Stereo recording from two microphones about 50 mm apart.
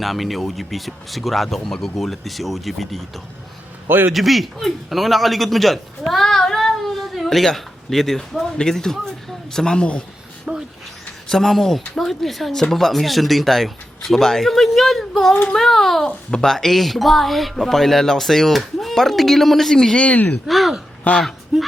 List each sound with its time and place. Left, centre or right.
0.0 s speech: centre
3.8 s a man's voice: right
4.1 s a man's voice: centre
10.5 s a sound: centre
11.3 s speech: centre
20.1 s speech: left
20.5 s speech: centre
21.1 s speech: left